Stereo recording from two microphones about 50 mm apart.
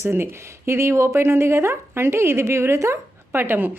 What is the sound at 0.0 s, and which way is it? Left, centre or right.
Speech, right.